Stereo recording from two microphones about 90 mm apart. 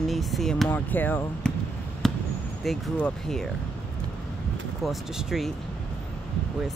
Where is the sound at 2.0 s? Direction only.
5° left (ahead or behind).